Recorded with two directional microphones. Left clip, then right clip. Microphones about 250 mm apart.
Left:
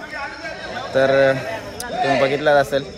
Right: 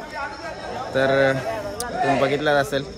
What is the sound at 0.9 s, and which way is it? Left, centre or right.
Speech, centre.